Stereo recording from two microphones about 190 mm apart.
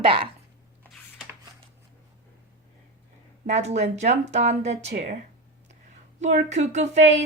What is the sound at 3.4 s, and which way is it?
Speech, 35° right (ahead or behind).